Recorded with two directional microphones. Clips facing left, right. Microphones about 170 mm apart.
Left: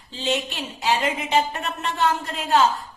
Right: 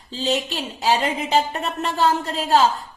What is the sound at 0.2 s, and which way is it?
Speech, 35° right (ahead or behind).